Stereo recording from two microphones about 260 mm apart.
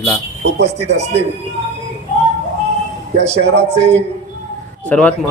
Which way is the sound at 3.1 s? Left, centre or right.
Right.